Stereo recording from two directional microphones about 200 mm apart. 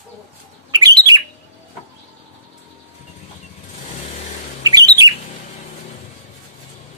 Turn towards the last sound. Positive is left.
turn(degrees=-20)  # may be behind; listen again after turning